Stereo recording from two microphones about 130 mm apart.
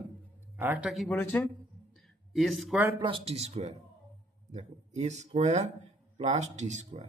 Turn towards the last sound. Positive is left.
turn(degrees=-60)  # may be behind; listen again after turning